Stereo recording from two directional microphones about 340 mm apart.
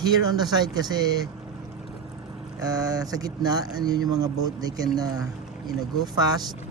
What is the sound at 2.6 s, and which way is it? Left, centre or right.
Speech, centre.